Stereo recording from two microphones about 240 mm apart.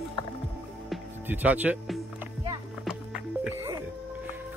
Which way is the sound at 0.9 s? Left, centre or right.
Centre.